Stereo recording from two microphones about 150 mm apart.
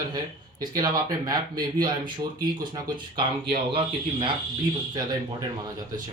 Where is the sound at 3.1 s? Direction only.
35° right (ahead or behind).